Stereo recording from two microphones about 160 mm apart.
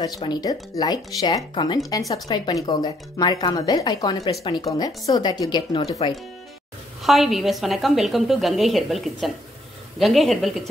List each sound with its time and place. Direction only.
0.0 s speech: 25° left (ahead or behind)
7.0 s a woman's voice: centre (ahead or behind)